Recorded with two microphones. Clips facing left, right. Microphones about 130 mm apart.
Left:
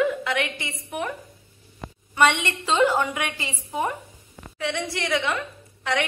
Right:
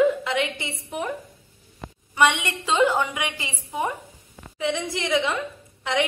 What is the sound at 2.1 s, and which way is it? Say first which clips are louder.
A woman's voice: even; 15° right (ahead or behind).